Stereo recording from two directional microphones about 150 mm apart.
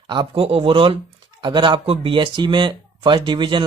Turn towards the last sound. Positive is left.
turn(degrees=-30)  # may be behind; listen again after turning